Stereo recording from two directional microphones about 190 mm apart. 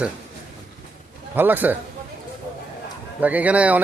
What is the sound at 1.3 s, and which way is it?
Speech, 10° right (ahead or behind).